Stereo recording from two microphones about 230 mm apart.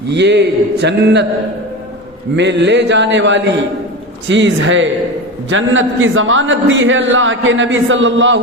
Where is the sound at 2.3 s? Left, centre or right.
Right.